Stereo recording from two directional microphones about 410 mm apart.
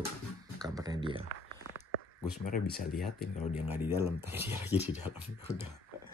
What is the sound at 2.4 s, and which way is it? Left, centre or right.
Speech, centre.